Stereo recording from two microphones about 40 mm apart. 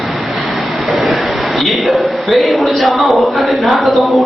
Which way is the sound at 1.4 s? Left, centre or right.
Centre.